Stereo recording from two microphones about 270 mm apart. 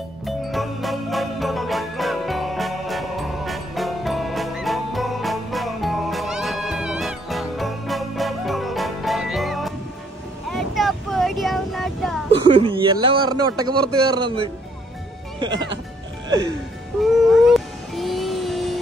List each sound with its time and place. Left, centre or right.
0.2 s music: centre
10.5 s vehicle: centre
12.3 s a sound: centre
13.6 s a man's voice: centre
15.3 s music: centre
17.3 s cat: centre